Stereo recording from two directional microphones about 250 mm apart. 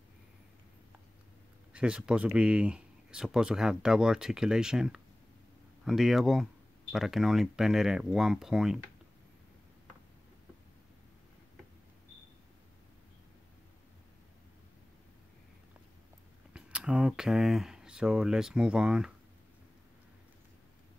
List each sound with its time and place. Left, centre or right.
1.7 s speech: centre
16.5 s speech: centre